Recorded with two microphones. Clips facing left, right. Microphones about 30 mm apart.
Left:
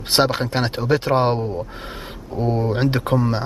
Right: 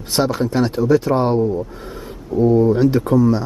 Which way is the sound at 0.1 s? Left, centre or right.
Left.